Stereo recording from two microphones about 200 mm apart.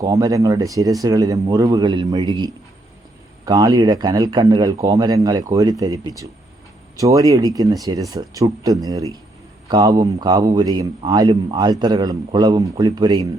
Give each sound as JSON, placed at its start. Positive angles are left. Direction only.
{"t": 0.0, "sound": "a man's voice", "side_deg": -15}